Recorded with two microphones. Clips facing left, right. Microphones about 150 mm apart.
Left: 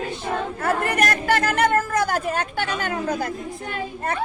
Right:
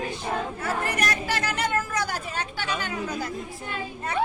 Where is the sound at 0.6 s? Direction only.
55° left (ahead or behind).